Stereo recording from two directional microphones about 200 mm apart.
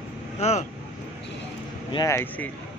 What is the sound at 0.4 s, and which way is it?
Speech, 35° left (ahead or behind).